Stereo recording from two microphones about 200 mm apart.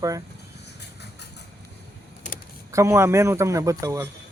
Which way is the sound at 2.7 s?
15° right (ahead or behind).